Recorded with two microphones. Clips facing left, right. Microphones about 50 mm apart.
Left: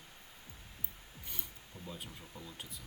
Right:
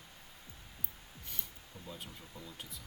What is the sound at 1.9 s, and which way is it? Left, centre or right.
Speech, centre.